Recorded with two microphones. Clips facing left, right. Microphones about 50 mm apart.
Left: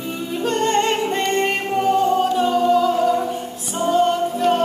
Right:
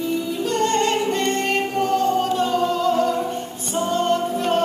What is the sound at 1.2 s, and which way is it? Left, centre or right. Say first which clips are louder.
Singing: left 1 dB; centre.